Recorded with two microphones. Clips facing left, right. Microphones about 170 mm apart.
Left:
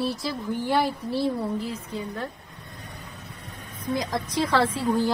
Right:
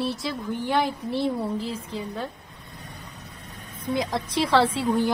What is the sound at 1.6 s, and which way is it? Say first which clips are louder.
Child singing: right 1 dB; 30° right (ahead or behind).